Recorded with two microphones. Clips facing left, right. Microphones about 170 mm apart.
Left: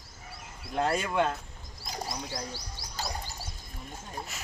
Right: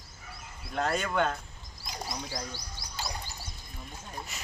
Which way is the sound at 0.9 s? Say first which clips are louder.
Right 1 dB; 10° left (ahead or behind).